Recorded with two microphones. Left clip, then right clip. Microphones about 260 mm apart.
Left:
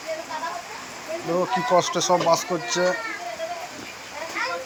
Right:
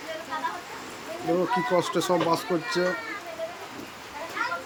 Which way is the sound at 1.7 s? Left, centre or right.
Centre.